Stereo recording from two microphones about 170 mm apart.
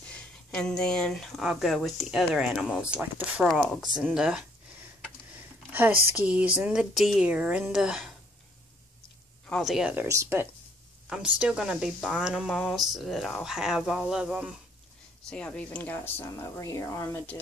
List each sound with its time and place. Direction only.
0.5 s speech: 5° left (ahead or behind)
5.7 s a sound: 10° right (ahead or behind)
6.1 s speech: 5° right (ahead or behind)
9.5 s speech: centre (ahead or behind)
10.0 s speech: 15° right (ahead or behind)
11.1 s speech: 5° right (ahead or behind)
15.2 s speech: 5° left (ahead or behind)